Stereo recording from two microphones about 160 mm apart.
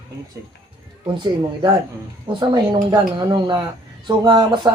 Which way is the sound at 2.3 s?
30° right (ahead or behind).